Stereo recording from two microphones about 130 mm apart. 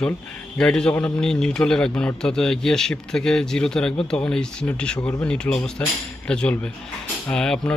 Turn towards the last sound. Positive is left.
turn(degrees=5)  # may be behind; listen again after turning